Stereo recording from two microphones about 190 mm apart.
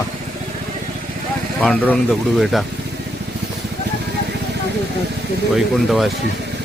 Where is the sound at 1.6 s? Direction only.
5° left (ahead or behind).